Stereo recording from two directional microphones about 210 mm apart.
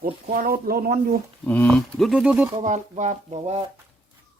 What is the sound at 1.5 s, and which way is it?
Speech, 5° left (ahead or behind).